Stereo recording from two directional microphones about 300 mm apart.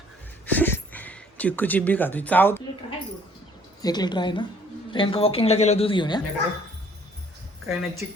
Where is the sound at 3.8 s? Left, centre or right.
Centre.